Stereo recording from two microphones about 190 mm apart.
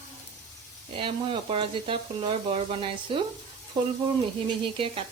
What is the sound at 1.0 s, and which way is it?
Frying, 25° right (ahead or behind).